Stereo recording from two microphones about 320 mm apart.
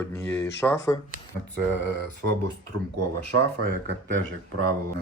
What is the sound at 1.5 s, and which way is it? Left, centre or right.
Speech, right.